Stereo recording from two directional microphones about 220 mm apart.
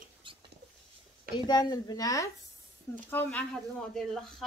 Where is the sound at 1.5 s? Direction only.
20° left (ahead or behind).